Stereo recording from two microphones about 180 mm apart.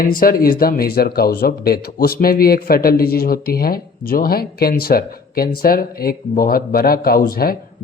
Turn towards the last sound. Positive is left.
turn(degrees=55)  # may be behind; listen again after turning